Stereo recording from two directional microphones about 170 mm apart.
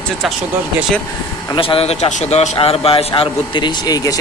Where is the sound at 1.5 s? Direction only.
30° left (ahead or behind).